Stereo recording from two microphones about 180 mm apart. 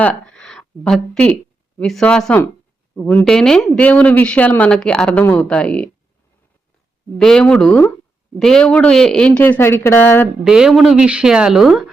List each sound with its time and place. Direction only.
0.0 s a man's voice: 5° left (ahead or behind)
7.2 s a man's voice: 5° left (ahead or behind)
10.4 s speech: 5° right (ahead or behind)